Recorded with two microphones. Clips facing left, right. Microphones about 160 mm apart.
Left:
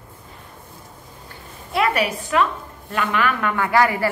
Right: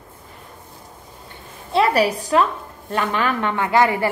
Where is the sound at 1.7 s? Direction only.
35° right (ahead or behind).